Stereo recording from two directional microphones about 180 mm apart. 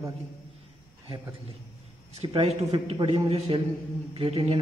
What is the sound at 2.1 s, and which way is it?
A man's voice, 35° right (ahead or behind).